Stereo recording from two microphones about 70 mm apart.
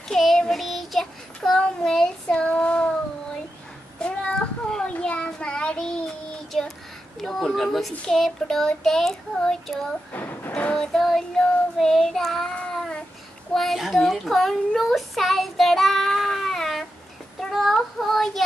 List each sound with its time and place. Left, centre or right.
0.1 s child singing: centre
4.0 s child singing: centre
7.9 s speech: centre
8.2 s child singing: centre
10.1 s a sound: left
10.5 s child singing: centre
13.5 s a sound: centre
17.4 s child singing: centre